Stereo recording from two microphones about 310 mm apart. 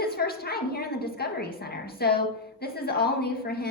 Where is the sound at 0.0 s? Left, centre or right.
Left.